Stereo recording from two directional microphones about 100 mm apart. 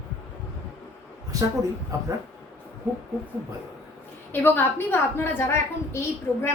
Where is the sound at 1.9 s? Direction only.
30° right (ahead or behind).